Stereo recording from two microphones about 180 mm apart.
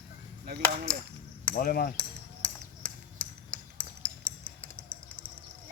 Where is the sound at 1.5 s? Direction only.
55° left (ahead or behind).